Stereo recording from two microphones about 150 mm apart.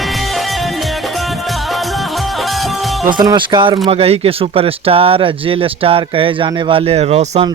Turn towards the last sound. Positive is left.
turn(degrees=-45)  # may be behind; listen again after turning